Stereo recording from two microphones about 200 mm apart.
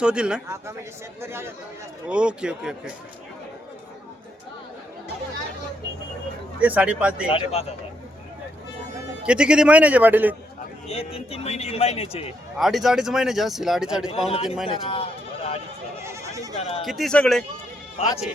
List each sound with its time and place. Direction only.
0.0 s a man's voice: 5° right (ahead or behind)
6.6 s a man's voice: 5° right (ahead or behind)
7.3 s speech: 25° left (ahead or behind)
9.2 s a man's voice: 5° right (ahead or behind)
10.8 s a man's voice: 30° left (ahead or behind)
12.5 s a man's voice: centre (ahead or behind)
14.1 s speech: 30° left (ahead or behind)
14.4 s a man's voice: centre (ahead or behind)
14.7 s speech: 25° left (ahead or behind)
16.0 s goat: 15° right (ahead or behind)
16.6 s a sound: 30° left (ahead or behind)
16.8 s a man's voice: centre (ahead or behind)
18.0 s a man's voice: 30° left (ahead or behind)